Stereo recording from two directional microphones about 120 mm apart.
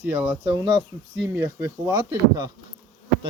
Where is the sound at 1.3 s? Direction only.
25° right (ahead or behind).